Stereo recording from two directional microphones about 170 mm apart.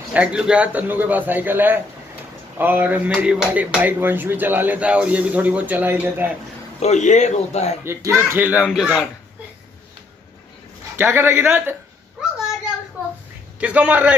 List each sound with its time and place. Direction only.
0.1 s speech: 5° right (ahead or behind)
6.8 s speech: 45° left (ahead or behind)
7.8 s speech: 15° right (ahead or behind)
8.6 s speech: centre (ahead or behind)
11.0 s speech: 15° right (ahead or behind)
13.6 s speech: 10° right (ahead or behind)